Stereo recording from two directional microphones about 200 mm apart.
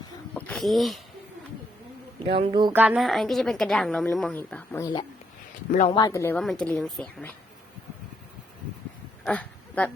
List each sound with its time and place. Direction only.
0.3 s speech: 5° left (ahead or behind)
2.1 s speech: 30° right (ahead or behind)
2.7 s a woman's voice: 5° right (ahead or behind); by 6.4 s 15° left (ahead or behind)
6.4 s a woman's voice: 5° left (ahead or behind)
9.2 s a sound: 5° left (ahead or behind)